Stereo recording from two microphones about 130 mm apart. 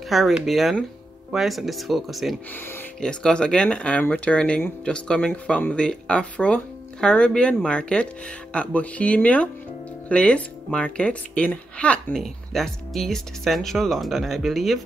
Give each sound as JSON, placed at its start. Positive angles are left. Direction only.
{"t": 0.1, "sound": "speech", "side_deg": 0}